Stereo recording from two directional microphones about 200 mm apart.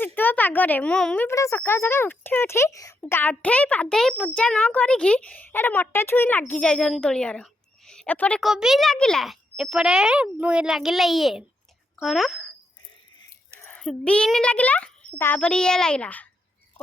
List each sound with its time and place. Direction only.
0.0 s a child's voice: 10° left (ahead or behind)
13.6 s a child's voice: 5° left (ahead or behind)